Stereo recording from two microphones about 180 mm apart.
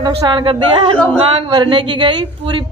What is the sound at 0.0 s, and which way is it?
Speech, 25° right (ahead or behind).